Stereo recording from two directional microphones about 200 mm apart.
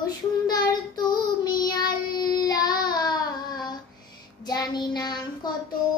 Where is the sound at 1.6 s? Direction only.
50° left (ahead or behind).